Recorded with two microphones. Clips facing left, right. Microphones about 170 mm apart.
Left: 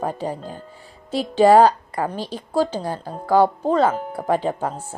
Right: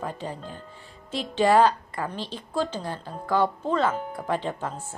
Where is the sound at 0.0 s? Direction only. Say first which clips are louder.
Left 7 dB; 45° left (ahead or behind).